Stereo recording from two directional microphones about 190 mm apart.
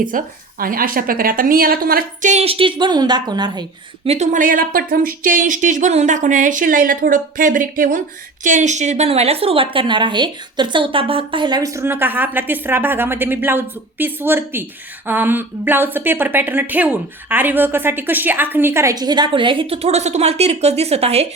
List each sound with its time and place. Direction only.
0.1 s a woman's voice: 45° right (ahead or behind); by 4.1 s 20° right (ahead or behind)
4.1 s a woman's voice: 40° right (ahead or behind)